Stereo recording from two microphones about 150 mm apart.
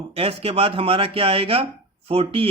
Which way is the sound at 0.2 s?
40° right (ahead or behind).